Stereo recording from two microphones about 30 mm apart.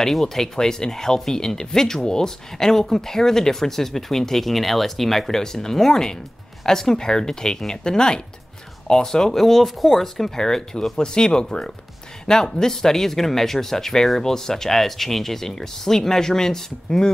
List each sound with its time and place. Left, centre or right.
0.2 s speech: centre